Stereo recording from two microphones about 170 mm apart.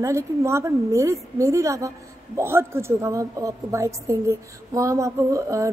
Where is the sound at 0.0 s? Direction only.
15° right (ahead or behind).